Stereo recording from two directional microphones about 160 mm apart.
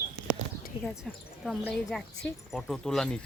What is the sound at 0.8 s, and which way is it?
Speech, centre (ahead or behind).